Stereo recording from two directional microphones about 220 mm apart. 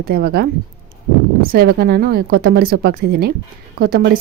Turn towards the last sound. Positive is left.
turn(degrees=-40)  # may be behind; listen again after turning